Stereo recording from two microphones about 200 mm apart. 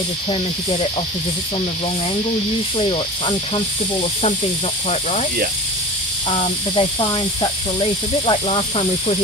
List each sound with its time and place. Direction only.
2.8 s speech: 25° left (ahead or behind)
6.3 s speech: 25° left (ahead or behind)